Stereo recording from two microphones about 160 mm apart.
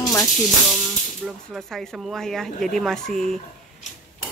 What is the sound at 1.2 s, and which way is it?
Speech, centre (ahead or behind).